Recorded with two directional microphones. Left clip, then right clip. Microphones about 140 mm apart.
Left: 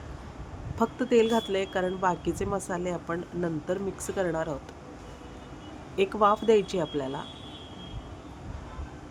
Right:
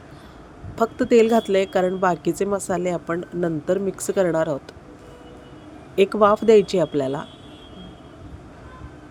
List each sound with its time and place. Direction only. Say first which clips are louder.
0.8 s speech: right 7 dB; 45° right (ahead or behind)
6.0 s speech: right 7 dB; 45° right (ahead or behind)